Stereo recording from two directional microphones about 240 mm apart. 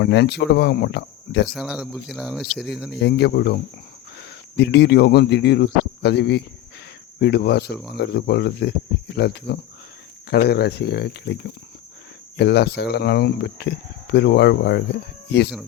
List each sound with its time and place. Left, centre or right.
0.0 s speech: left
1.5 s speech: centre
2.9 s speech: left